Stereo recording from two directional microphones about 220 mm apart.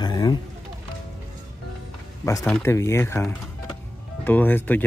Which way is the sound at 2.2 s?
15° left (ahead or behind).